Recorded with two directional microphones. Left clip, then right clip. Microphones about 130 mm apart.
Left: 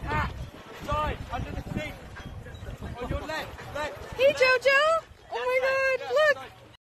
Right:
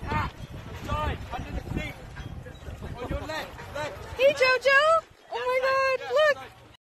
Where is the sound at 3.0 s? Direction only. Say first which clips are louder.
Even; centre (ahead or behind).